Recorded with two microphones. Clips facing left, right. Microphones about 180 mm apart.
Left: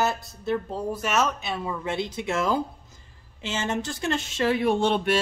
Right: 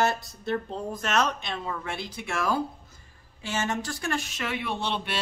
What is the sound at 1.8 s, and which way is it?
Speech, 25° left (ahead or behind).